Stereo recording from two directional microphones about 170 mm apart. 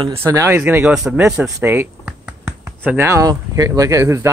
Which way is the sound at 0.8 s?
5° right (ahead or behind).